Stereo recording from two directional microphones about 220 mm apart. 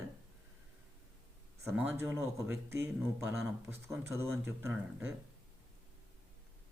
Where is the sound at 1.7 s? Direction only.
10° right (ahead or behind).